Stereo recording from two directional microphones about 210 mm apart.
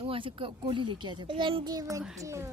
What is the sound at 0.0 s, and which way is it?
A woman's voice, 25° right (ahead or behind).